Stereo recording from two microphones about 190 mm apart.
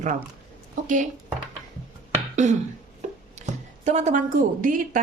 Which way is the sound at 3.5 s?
35° right (ahead or behind).